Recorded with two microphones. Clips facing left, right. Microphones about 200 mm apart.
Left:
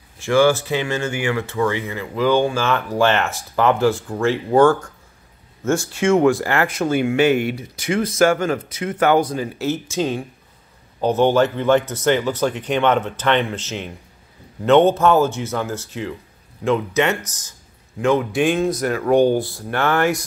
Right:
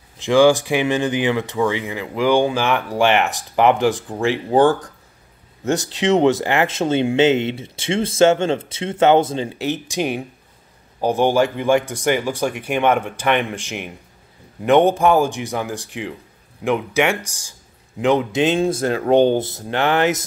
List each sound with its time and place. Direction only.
0.2 s speech: 15° right (ahead or behind)
4.6 s speech: 35° right (ahead or behind)
5.7 s speech: 20° right (ahead or behind)